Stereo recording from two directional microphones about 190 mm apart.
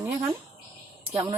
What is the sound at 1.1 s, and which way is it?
Speech, 35° right (ahead or behind).